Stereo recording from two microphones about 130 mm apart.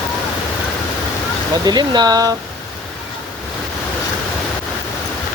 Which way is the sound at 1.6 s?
35° right (ahead or behind).